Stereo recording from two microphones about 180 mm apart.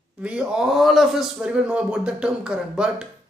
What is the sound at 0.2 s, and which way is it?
Speech, 5° right (ahead or behind).